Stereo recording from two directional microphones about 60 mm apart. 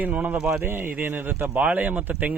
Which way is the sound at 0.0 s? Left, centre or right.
Right.